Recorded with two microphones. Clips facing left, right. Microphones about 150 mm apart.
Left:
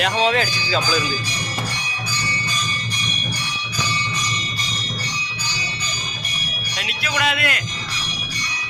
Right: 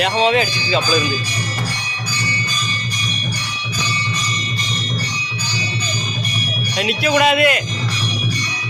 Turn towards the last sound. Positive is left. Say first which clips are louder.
# right 9 dB
turn(degrees=-15)  # may be behind; listen again after turning